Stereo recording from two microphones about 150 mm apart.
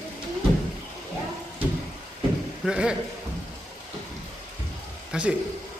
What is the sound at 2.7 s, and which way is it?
Speech, 5° right (ahead or behind).